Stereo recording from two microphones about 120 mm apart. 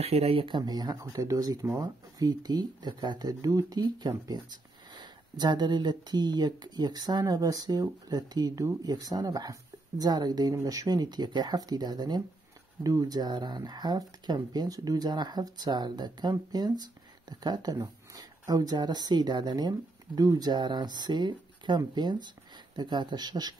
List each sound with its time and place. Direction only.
0.0 s speech: 60° right (ahead or behind)
0.5 s speech: 35° right (ahead or behind)